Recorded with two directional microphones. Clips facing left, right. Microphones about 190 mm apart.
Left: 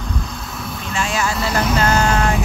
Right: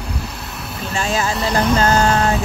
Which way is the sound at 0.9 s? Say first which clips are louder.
Right 1 dB; 35° right (ahead or behind).